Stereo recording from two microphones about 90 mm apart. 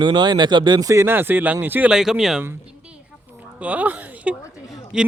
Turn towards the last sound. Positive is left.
turn(degrees=-5)  # may be behind; listen again after turning